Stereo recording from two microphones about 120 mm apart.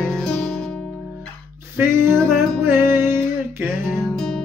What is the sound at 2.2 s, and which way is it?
Music, 20° right (ahead or behind).